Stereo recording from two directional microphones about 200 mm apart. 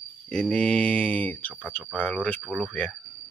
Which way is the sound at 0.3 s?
5° left (ahead or behind).